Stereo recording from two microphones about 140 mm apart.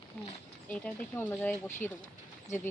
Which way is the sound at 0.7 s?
10° left (ahead or behind).